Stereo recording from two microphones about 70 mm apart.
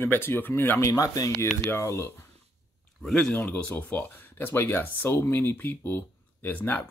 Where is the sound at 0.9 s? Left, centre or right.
Left.